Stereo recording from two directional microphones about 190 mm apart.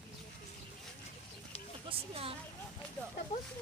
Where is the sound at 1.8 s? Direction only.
30° right (ahead or behind).